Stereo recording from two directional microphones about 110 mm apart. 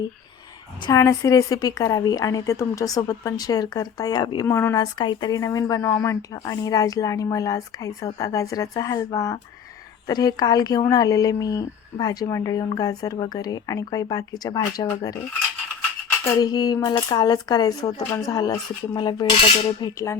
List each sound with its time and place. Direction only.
0.9 s speech: 30° left (ahead or behind)
4.4 s speech: 20° left (ahead or behind)
4.7 s speech: 40° left (ahead or behind)
16.2 s speech: 40° left (ahead or behind)